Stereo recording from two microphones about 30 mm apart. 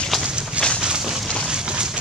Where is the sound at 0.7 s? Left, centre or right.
Right.